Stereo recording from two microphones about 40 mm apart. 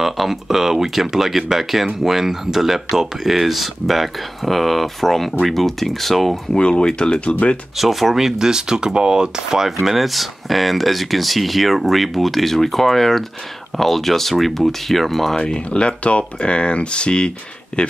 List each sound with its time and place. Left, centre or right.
0.0 s speech: centre
6.5 s speech: left
7.7 s speech: centre
9.7 s speech: centre
15.3 s speech: left